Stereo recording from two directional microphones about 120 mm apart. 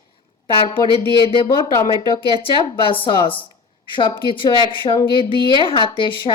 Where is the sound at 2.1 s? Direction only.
50° left (ahead or behind).